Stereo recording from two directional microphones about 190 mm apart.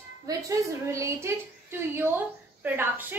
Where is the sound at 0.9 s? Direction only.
15° right (ahead or behind).